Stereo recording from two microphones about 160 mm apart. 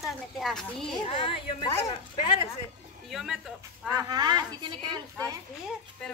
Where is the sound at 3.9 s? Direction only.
25° right (ahead or behind).